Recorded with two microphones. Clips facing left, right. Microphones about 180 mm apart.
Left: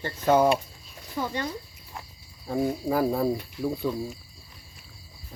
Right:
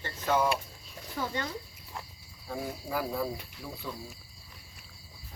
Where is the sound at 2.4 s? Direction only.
50° left (ahead or behind).